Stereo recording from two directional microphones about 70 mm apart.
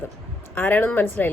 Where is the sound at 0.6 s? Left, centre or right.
Left.